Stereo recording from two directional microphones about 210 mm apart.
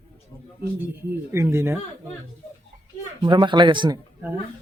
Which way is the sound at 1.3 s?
10° right (ahead or behind).